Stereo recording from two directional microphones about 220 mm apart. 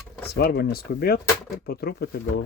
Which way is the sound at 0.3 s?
45° left (ahead or behind).